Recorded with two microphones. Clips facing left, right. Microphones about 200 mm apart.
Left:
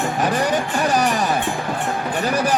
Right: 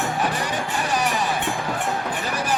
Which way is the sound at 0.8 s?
40° left (ahead or behind).